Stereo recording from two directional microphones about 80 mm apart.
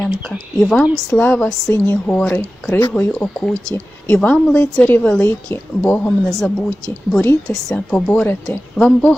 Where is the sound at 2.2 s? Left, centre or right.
Left.